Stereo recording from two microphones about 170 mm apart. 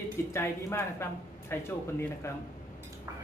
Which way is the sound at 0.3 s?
15° left (ahead or behind).